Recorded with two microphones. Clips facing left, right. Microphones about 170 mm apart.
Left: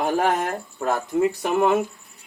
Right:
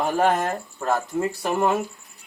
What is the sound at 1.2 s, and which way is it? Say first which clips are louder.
Speech: left 6 dB; 15° left (ahead or behind).